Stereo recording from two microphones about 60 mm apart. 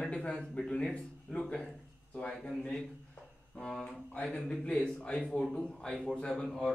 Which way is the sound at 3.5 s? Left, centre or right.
Centre.